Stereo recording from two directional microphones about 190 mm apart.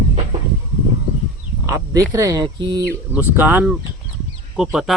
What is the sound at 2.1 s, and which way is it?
Speech, 15° right (ahead or behind).